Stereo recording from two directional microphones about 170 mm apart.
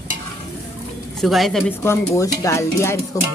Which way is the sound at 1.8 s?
20° left (ahead or behind).